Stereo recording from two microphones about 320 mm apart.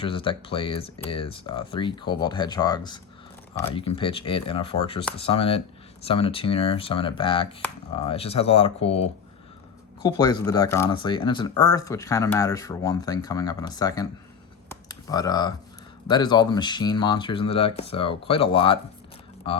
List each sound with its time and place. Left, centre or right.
0.0 s speech: centre
14.7 s computer keyboard: centre
16.0 s speech: centre